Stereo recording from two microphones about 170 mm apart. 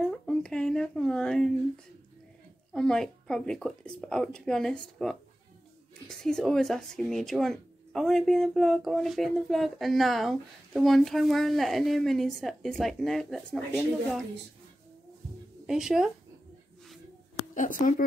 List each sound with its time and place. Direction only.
0.0 s speech: 5° left (ahead or behind)
2.7 s speech: 5° left (ahead or behind)
6.0 s speech: 5° left (ahead or behind)
15.6 s speech: 5° right (ahead or behind)
17.6 s speech: 50° left (ahead or behind)